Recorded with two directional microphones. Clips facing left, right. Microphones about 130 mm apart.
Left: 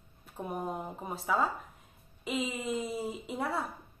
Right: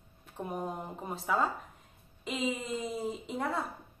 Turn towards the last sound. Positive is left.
turn(degrees=5)  # may be behind; listen again after turning